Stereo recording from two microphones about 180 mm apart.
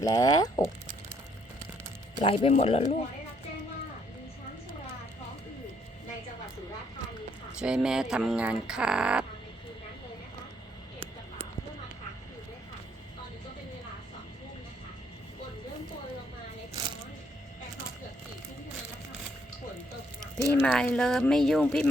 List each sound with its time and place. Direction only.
0.0 s speech: 20° left (ahead or behind)
2.1 s speech: 30° left (ahead or behind)
7.6 s speech: 5° right (ahead or behind)
20.4 s speech: 10° left (ahead or behind)